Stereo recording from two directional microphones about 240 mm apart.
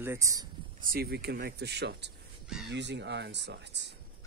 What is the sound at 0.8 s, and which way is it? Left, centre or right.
Speech, right.